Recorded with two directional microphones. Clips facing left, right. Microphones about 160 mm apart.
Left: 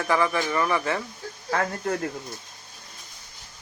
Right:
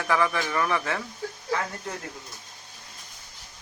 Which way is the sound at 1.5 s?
55° left (ahead or behind).